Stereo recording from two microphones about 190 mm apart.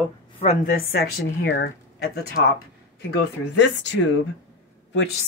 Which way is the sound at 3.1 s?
65° left (ahead or behind).